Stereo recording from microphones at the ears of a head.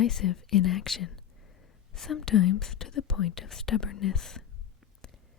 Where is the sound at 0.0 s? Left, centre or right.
Left.